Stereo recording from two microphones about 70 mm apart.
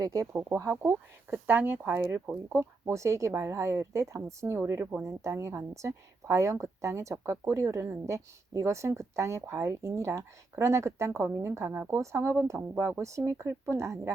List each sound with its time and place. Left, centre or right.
0.0 s a woman's voice: right
0.4 s speech: right
1.3 s speech: right
2.5 s speech: right
5.0 s a woman's voice: right